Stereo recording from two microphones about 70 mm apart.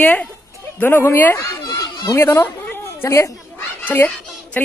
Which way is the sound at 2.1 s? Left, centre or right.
Left.